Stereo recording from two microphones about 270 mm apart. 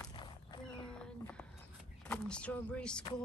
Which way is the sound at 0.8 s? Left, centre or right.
Centre.